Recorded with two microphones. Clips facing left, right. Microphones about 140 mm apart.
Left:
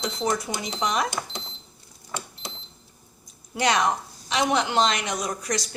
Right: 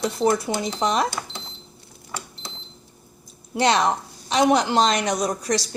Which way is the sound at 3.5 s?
30° right (ahead or behind).